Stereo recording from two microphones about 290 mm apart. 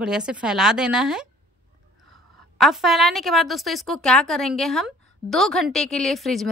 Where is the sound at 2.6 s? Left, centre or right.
Centre.